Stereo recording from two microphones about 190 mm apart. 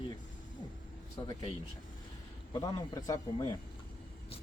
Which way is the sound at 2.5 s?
20° left (ahead or behind).